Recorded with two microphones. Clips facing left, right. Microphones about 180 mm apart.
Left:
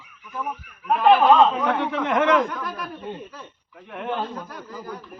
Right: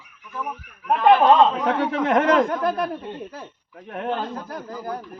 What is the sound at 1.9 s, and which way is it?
Speech, 40° right (ahead or behind).